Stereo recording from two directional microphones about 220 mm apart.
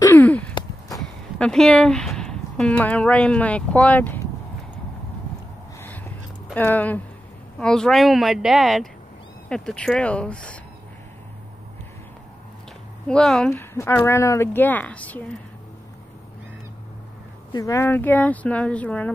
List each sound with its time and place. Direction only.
0.0 s sigh: 10° left (ahead or behind)
0.6 s a sound: 15° left (ahead or behind)
1.4 s speech: centre (ahead or behind)
5.8 s a sound: 10° left (ahead or behind)
6.5 s speech: 10° left (ahead or behind)
13.1 s speech: 5° left (ahead or behind)
17.5 s speech: 15° left (ahead or behind)